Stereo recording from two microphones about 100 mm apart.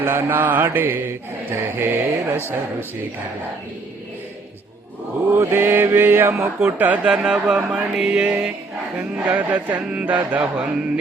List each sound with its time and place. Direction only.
0.0 s mantra: 20° right (ahead or behind)
5.3 s mantra: 20° right (ahead or behind)
6.6 s chant: 15° right (ahead or behind)